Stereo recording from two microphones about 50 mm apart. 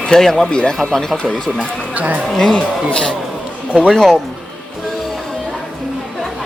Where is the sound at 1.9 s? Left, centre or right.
Right.